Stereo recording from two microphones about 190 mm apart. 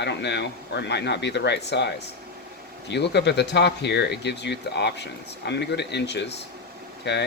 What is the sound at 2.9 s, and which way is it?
Speech, 65° left (ahead or behind).